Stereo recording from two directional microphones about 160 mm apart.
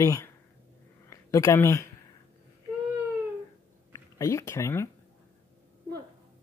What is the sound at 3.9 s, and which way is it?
Speech, 20° left (ahead or behind).